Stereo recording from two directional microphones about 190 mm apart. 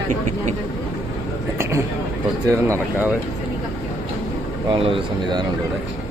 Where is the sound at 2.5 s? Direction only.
15° right (ahead or behind).